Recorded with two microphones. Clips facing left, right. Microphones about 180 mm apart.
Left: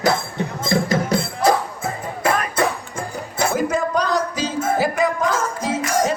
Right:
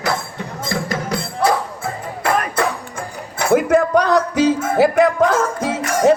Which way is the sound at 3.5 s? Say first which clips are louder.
Right 9 dB; 60° right (ahead or behind).